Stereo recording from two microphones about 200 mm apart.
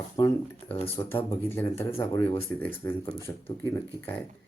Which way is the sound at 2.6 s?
10° left (ahead or behind).